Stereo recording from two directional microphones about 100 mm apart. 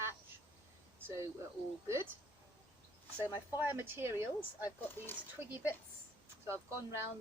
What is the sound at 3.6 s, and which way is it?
Speech, 20° right (ahead or behind).